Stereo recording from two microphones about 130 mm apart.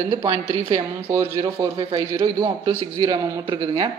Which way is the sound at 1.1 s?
25° right (ahead or behind).